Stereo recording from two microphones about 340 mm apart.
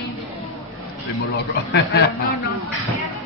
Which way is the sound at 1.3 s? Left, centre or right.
Left.